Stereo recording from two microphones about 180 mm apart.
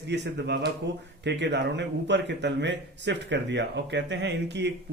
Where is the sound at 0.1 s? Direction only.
70° right (ahead or behind).